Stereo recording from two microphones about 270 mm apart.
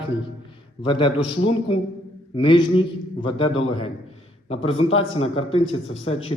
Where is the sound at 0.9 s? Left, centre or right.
Centre.